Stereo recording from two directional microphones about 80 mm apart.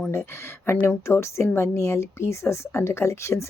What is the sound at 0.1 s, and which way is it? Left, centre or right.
A woman's voice, left.